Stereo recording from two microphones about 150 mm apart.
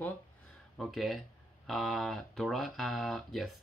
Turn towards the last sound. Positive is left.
turn(degrees=0)  # may be behind; listen again after turning